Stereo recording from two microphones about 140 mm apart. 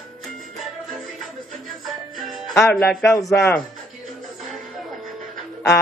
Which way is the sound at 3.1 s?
25° left (ahead or behind).